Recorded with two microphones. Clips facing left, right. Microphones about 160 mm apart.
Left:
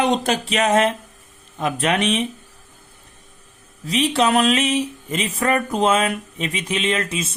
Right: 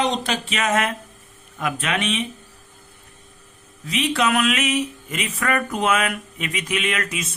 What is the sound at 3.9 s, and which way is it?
Speech, 35° left (ahead or behind).